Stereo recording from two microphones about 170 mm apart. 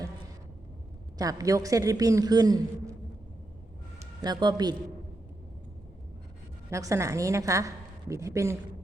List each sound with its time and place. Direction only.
1.2 s a man's voice: 20° right (ahead or behind)
4.0 s speech: 25° right (ahead or behind)
6.7 s a man's voice: 20° right (ahead or behind)